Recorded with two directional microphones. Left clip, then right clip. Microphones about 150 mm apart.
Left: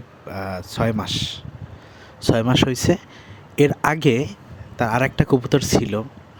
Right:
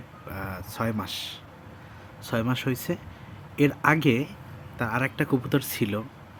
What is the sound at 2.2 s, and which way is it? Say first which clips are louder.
Speech: left 10 dB; 50° left (ahead or behind).